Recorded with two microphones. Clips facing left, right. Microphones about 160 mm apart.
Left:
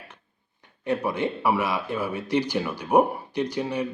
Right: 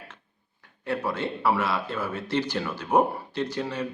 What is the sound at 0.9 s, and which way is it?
Speech, 15° left (ahead or behind).